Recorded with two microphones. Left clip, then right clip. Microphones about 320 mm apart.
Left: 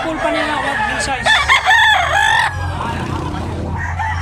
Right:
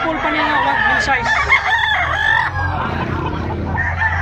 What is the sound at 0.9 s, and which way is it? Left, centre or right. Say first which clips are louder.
Speech: right 4 dB; centre.